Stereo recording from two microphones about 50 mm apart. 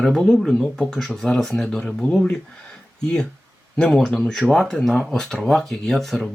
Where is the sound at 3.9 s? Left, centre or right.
Centre.